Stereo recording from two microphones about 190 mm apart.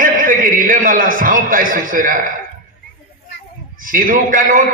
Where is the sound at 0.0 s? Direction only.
45° right (ahead or behind).